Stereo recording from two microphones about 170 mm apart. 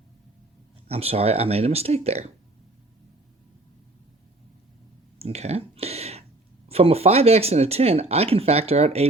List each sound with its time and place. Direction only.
0.9 s speech: 35° right (ahead or behind)
5.2 s a sound: 40° right (ahead or behind)
6.7 s speech: 35° right (ahead or behind)